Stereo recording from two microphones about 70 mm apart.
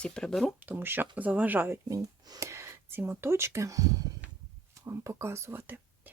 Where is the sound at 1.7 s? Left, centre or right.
Right.